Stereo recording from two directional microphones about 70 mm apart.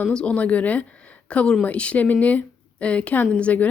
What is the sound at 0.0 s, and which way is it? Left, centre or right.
A woman's voice, centre.